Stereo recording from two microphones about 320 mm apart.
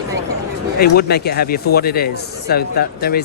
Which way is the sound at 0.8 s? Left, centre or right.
Left.